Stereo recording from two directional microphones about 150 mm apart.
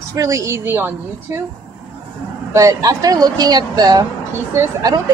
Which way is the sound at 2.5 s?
20° right (ahead or behind).